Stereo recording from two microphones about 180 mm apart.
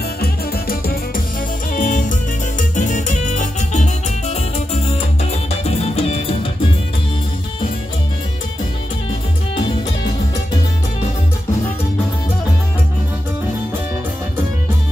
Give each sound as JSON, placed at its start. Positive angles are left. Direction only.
{"t": 0.2, "sound": "music", "side_deg": 60}
{"t": 1.7, "sound": "music", "side_deg": 45}